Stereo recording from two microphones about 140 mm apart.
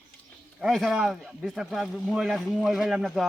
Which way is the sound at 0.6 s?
Centre (ahead or behind).